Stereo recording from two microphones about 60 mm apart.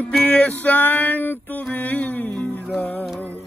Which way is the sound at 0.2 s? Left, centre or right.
Left.